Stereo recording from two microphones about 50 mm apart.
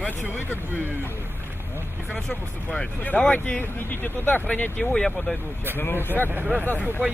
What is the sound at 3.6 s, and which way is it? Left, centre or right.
Speech, left.